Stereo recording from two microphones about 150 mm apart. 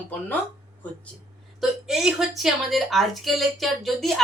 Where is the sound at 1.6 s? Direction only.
5° right (ahead or behind).